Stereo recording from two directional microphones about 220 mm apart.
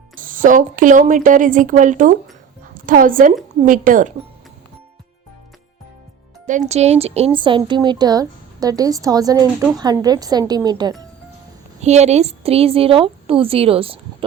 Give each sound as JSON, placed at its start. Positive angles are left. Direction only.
{"t": 0.2, "sound": "a woman's voice", "side_deg": -35}
{"t": 6.4, "sound": "a woman's voice", "side_deg": -35}
{"t": 11.8, "sound": "a woman's voice", "side_deg": -30}